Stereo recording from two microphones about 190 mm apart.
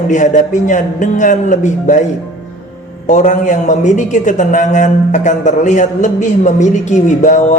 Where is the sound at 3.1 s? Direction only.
40° left (ahead or behind).